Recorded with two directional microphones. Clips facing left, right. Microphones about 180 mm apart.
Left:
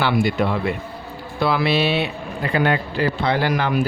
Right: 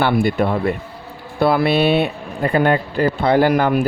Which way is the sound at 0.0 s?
55° right (ahead or behind).